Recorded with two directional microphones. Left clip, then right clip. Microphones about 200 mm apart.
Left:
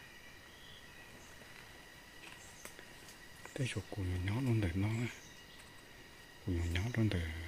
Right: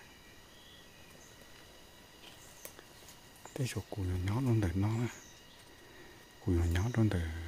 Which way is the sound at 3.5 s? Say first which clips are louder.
Right 1 dB; 15° right (ahead or behind).